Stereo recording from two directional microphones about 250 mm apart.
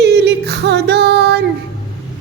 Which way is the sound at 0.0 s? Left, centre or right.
Right.